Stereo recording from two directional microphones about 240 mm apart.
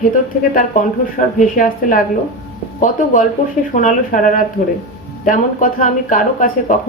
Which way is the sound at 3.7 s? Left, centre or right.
Left.